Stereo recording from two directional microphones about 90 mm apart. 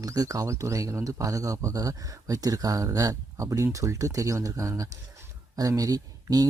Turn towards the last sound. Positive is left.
turn(degrees=-45)  # may be behind; listen again after turning